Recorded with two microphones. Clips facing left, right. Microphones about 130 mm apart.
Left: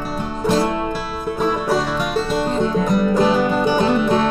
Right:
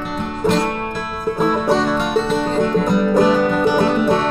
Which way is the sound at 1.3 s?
5° left (ahead or behind).